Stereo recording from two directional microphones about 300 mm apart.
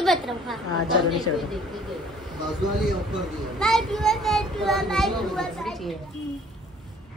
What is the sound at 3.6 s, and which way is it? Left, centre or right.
A child's voice, centre.